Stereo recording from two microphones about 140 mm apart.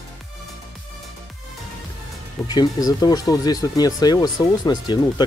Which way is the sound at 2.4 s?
30° left (ahead or behind).